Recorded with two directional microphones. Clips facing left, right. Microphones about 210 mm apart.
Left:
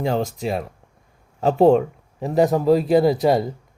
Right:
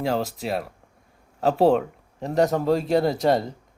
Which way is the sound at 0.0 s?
5° right (ahead or behind).